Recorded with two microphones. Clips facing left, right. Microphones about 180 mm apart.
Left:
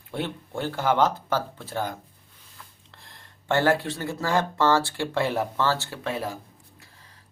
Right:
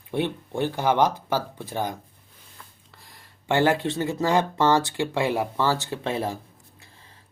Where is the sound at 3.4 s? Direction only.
15° right (ahead or behind).